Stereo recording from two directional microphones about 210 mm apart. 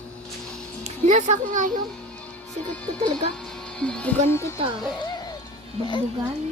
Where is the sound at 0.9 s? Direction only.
35° right (ahead or behind).